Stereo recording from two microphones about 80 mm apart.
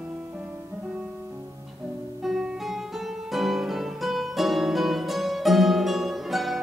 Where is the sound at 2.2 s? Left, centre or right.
Centre.